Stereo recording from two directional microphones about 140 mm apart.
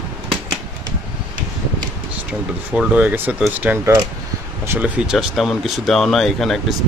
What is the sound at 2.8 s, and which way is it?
Speech, 10° right (ahead or behind).